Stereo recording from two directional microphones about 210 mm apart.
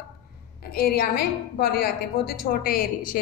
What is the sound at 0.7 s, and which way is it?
A woman's voice, 45° left (ahead or behind).